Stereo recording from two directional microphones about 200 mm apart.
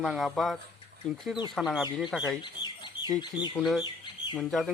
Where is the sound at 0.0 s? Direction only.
Centre (ahead or behind).